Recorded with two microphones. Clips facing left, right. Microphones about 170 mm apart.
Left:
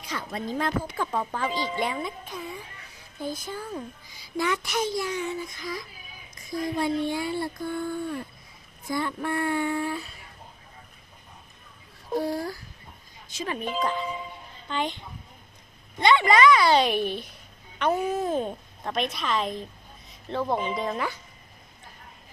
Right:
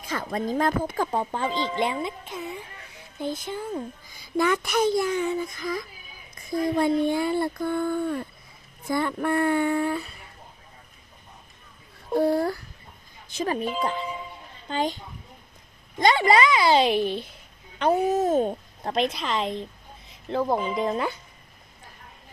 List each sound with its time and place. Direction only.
0.0 s speech: 50° right (ahead or behind)
1.2 s a child's voice: 25° right (ahead or behind)
4.1 s speech: 50° right (ahead or behind)
12.1 s speech: 60° right (ahead or behind)
13.3 s speech: 45° right (ahead or behind)
14.7 s a woman's voice: 40° right (ahead or behind)
20.7 s a child's voice: 25° right (ahead or behind)